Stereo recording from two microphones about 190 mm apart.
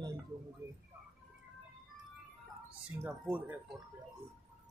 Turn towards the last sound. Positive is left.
turn(degrees=-10)  # may be behind; listen again after turning